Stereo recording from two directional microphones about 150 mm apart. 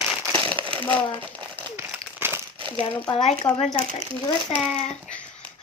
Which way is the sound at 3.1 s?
35° left (ahead or behind).